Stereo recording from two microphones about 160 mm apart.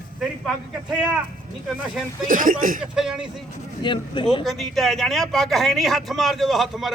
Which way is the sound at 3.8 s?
30° left (ahead or behind).